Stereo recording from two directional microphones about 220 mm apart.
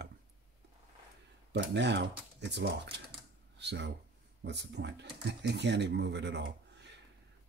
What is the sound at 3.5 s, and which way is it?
Speech, 50° right (ahead or behind).